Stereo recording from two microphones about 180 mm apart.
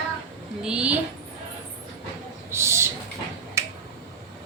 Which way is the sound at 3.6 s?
15° right (ahead or behind).